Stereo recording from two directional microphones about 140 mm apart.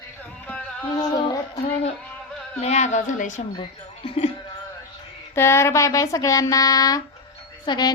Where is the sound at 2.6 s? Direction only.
55° left (ahead or behind).